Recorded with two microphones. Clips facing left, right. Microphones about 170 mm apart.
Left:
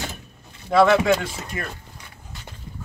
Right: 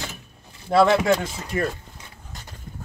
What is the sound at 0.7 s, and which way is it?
Speech, 35° right (ahead or behind).